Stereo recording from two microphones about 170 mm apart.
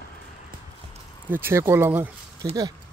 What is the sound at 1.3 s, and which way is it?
Speech, 15° right (ahead or behind).